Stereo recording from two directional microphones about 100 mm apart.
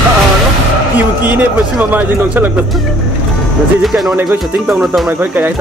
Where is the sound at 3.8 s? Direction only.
Centre (ahead or behind).